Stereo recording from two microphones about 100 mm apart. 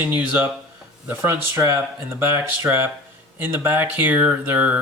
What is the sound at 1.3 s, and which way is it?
Speech, 30° right (ahead or behind).